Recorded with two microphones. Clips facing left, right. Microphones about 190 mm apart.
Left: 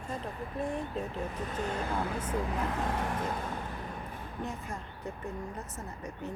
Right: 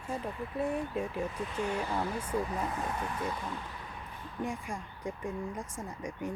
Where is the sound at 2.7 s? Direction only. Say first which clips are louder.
Left 3 dB; 65° left (ahead or behind).